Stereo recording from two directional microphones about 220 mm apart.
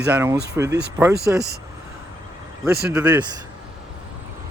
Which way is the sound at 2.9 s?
5° right (ahead or behind).